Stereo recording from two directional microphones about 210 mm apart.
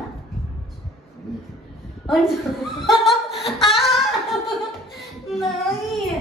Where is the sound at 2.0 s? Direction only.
Centre (ahead or behind).